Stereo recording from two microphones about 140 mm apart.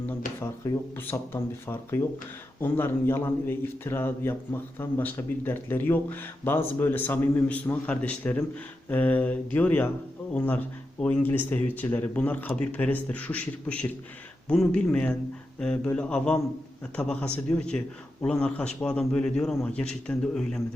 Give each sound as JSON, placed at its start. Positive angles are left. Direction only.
{"t": 0.3, "sound": "a man's voice", "side_deg": 15}